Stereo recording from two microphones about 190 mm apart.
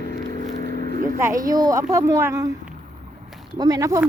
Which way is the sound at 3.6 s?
20° right (ahead or behind).